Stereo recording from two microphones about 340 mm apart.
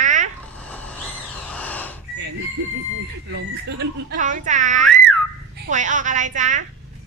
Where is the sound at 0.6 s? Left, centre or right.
Centre.